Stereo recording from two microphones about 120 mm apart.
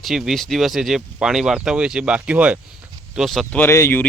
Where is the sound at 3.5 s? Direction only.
20° left (ahead or behind).